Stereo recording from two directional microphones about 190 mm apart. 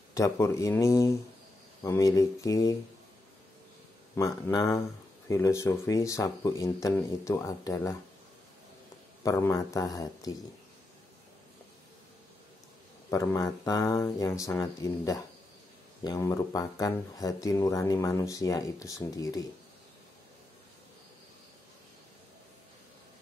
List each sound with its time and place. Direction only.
0.1 s speech: 15° left (ahead or behind)
4.1 s speech: 15° left (ahead or behind)
9.2 s speech: 15° left (ahead or behind)
13.1 s speech: 20° left (ahead or behind)